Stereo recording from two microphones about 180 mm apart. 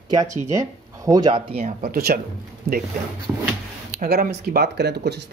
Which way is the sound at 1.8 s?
55° right (ahead or behind).